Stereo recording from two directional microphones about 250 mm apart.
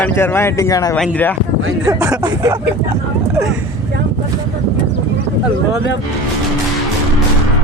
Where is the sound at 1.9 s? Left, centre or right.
Centre.